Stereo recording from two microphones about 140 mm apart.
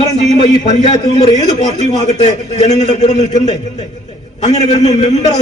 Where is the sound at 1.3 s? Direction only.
55° left (ahead or behind).